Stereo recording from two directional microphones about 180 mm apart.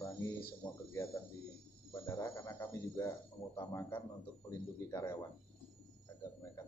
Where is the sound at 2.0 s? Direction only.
15° left (ahead or behind).